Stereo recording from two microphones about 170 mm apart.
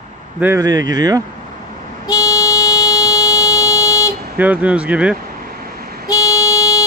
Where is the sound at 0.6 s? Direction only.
20° right (ahead or behind).